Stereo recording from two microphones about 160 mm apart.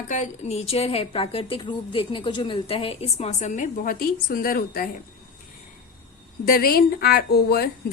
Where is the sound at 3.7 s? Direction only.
65° left (ahead or behind).